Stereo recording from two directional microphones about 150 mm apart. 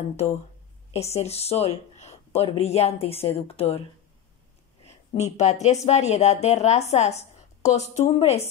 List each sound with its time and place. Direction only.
0.1 s a woman's voice: 45° left (ahead or behind)
5.2 s a woman's voice: 50° left (ahead or behind)